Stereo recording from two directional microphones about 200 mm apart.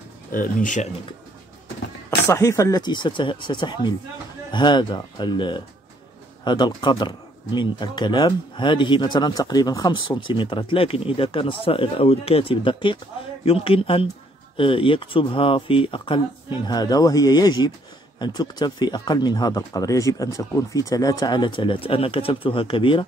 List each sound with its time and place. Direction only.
0.3 s speech: 40° left (ahead or behind)
2.0 s speech: 15° left (ahead or behind)